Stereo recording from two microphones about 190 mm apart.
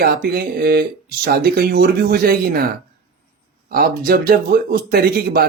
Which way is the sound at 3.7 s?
50° right (ahead or behind).